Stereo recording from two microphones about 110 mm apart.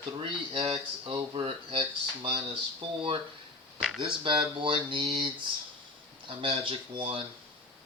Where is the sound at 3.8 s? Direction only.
Centre (ahead or behind).